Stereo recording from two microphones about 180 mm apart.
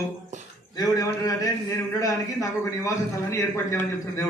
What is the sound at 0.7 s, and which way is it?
A man's voice, 20° left (ahead or behind).